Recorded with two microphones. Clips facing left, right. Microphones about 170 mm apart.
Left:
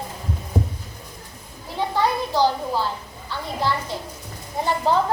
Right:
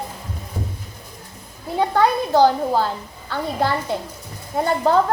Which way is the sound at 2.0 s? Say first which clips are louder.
Right 5 dB; 50° right (ahead or behind).